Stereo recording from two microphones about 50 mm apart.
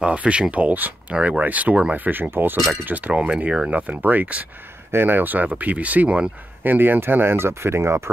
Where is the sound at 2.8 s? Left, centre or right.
Right.